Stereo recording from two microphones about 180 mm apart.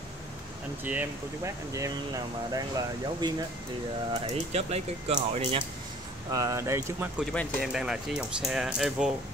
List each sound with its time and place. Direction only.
0.8 s speech: 10° right (ahead or behind)
4.1 s speech: 35° right (ahead or behind)
6.3 s speech: 20° right (ahead or behind)
7.6 s speech: 5° right (ahead or behind)